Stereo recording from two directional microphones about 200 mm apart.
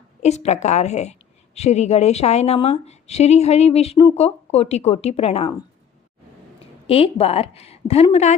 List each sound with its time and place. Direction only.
0.2 s a woman's voice: 35° left (ahead or behind)
6.8 s a woman's voice: 30° left (ahead or behind)